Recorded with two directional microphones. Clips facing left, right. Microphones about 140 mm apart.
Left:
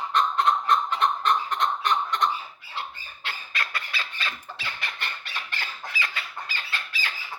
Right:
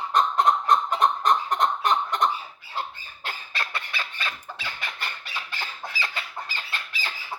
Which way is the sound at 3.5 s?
30° right (ahead or behind).